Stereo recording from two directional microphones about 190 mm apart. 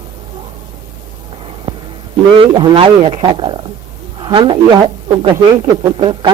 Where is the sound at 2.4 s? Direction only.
25° right (ahead or behind).